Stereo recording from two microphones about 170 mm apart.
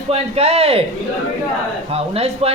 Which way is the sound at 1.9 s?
35° right (ahead or behind).